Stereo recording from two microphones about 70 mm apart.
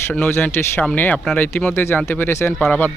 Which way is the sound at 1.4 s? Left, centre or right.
Left.